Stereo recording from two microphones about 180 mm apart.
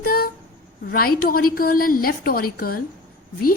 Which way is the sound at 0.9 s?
55° left (ahead or behind).